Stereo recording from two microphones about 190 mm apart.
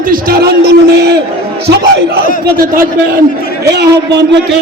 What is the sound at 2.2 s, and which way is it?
Speech, 50° right (ahead or behind).